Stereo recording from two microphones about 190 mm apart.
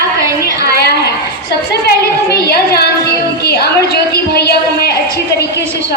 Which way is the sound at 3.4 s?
55° left (ahead or behind).